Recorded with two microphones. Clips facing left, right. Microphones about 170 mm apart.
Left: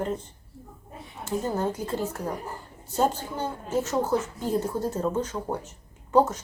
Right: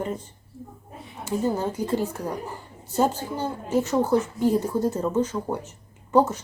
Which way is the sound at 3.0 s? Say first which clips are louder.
Right 2 dB; 10° right (ahead or behind).